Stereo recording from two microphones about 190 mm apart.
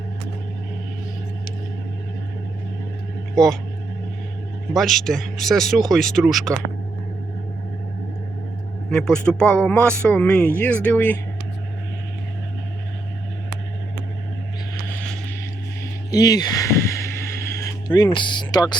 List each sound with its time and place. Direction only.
3.3 s speech: centre (ahead or behind)
4.7 s speech: centre (ahead or behind)
8.9 s speech: 5° left (ahead or behind)
16.1 s speech: 20° left (ahead or behind)